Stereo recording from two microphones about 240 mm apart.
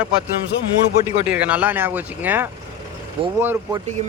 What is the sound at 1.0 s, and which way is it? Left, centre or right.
Speech, centre.